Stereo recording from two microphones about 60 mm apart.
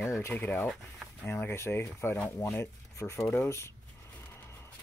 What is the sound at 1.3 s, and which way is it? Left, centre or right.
Speech, left.